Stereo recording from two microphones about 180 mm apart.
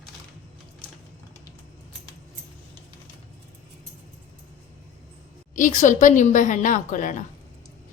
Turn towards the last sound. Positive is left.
turn(degrees=45)  # may be behind; listen again after turning